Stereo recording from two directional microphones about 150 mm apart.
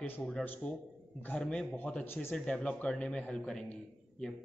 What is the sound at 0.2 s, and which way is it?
A man's voice, 5° left (ahead or behind).